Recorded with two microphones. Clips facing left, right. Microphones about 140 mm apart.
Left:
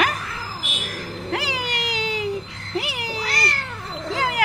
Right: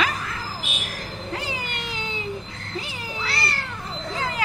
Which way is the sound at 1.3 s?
90° left.